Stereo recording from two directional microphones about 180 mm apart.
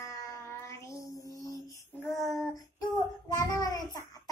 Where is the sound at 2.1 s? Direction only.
Centre (ahead or behind).